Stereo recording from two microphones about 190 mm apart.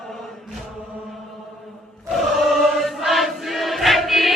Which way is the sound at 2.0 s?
Centre (ahead or behind).